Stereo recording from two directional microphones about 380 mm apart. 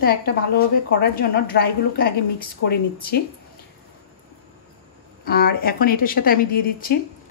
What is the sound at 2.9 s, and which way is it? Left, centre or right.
Speech, left.